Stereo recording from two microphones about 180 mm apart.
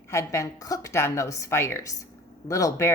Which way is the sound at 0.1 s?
15° left (ahead or behind).